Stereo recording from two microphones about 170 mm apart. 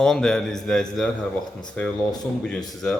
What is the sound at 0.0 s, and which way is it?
Speech, 5° left (ahead or behind).